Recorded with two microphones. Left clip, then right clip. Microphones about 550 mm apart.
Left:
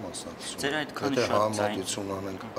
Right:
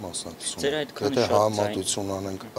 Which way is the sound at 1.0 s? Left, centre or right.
Right.